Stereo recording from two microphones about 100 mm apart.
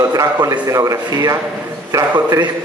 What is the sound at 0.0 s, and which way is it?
A man's voice, 35° right (ahead or behind).